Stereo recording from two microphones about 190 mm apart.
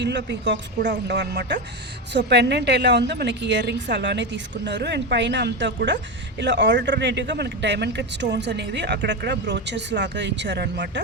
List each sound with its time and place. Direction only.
0.0 s speech: 65° right (ahead or behind)